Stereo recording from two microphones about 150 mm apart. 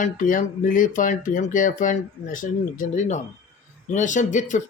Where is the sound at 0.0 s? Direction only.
60° left (ahead or behind).